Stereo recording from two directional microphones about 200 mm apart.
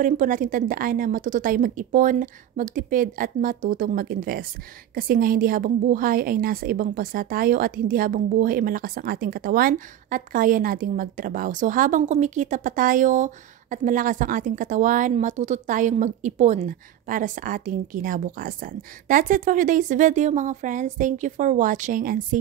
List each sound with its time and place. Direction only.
0.0 s a woman's voice: 40° right (ahead or behind)